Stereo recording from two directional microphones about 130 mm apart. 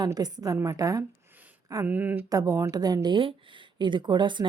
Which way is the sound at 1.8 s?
15° right (ahead or behind).